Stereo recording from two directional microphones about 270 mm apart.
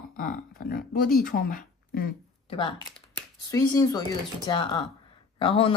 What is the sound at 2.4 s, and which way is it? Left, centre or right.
Speech, centre.